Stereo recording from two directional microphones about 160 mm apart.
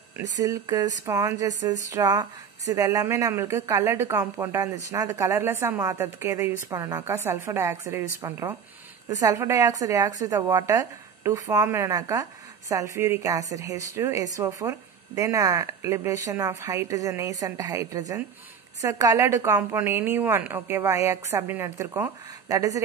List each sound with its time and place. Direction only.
0.4 s speech: 25° right (ahead or behind)